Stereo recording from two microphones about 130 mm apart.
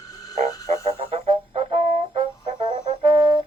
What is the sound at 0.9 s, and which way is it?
Brass instrument, 50° right (ahead or behind).